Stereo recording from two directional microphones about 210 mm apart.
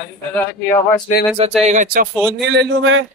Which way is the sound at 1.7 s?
40° right (ahead or behind).